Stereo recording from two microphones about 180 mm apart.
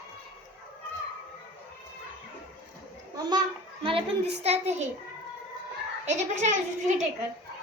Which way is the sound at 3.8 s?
30° right (ahead or behind).